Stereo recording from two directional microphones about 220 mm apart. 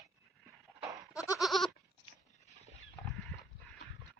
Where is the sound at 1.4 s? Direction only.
Centre (ahead or behind).